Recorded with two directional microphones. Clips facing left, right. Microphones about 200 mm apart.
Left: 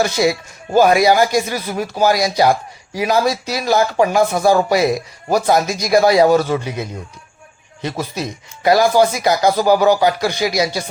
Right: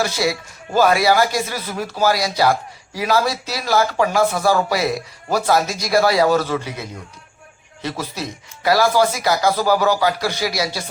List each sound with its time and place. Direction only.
0.0 s speech: 20° left (ahead or behind)